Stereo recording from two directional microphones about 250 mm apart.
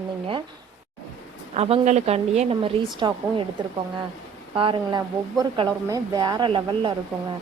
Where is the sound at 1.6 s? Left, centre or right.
Right.